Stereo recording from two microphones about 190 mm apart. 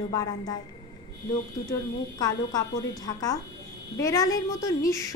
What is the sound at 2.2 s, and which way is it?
A woman's voice, 20° left (ahead or behind).